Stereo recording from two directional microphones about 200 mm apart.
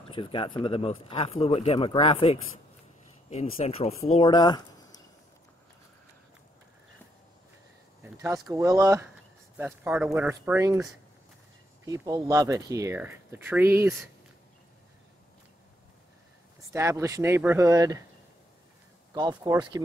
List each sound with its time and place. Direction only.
0.1 s speech: 25° left (ahead or behind)
8.0 s speech: 10° right (ahead or behind)
11.8 s speech: 15° right (ahead or behind)
16.7 s speech: 15° right (ahead or behind)
19.1 s speech: 20° right (ahead or behind)